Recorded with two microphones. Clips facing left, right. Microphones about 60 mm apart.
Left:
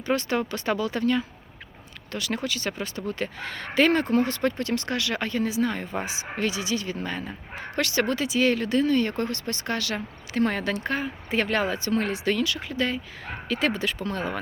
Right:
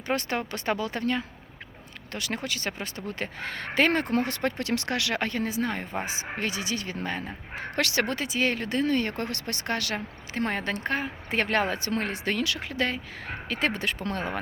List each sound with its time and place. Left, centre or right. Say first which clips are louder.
0.1 s speech: left 3 dB; right
4.6 s speech: left 1 dB; right
7.8 s speech: left 1 dB; right
8.0 s speech: left 4 dB; right